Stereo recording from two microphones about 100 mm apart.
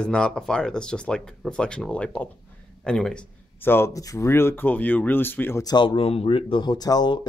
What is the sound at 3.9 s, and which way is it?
Speech, 35° left (ahead or behind).